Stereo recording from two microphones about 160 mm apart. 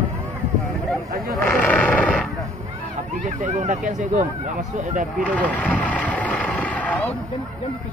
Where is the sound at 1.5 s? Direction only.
5° left (ahead or behind).